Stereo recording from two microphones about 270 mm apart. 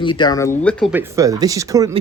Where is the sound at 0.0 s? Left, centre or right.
Centre.